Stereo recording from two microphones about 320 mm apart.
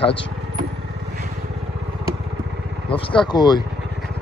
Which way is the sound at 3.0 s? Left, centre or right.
Centre.